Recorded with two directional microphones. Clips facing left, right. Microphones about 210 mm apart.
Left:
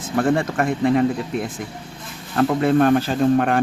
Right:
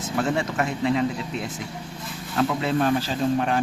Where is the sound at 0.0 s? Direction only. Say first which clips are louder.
Left 5 dB; 55° left (ahead or behind).